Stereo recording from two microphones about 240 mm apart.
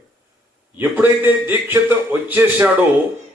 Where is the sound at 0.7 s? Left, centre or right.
Centre.